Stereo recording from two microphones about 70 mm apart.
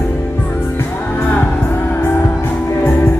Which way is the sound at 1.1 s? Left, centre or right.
Left.